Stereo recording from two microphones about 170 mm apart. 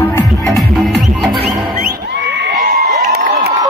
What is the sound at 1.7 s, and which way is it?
Music, 55° right (ahead or behind).